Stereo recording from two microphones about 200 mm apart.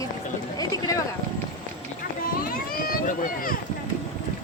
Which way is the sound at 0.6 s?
20° left (ahead or behind).